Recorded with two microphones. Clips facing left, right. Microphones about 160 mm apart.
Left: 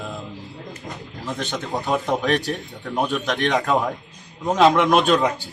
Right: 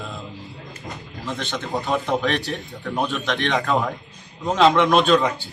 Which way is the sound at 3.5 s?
10° left (ahead or behind).